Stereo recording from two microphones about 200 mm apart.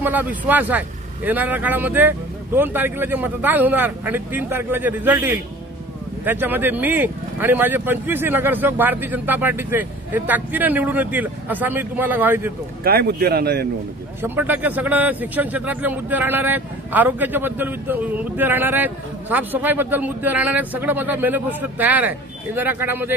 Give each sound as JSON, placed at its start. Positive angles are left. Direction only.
{"t": 0.0, "sound": "speech", "side_deg": -10}
{"t": 12.8, "sound": "speech", "side_deg": -50}
{"t": 14.2, "sound": "speech", "side_deg": -10}